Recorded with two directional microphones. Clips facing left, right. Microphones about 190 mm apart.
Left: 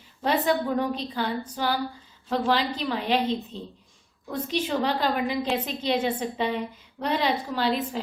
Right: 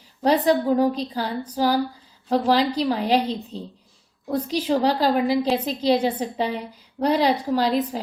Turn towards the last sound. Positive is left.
turn(degrees=-40)  # may be behind; listen again after turning